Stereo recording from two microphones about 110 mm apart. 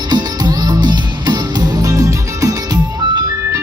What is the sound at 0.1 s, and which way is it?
Music, 35° right (ahead or behind).